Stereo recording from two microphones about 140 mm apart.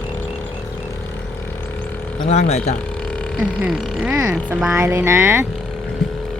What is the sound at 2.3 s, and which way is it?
Speech, 50° left (ahead or behind).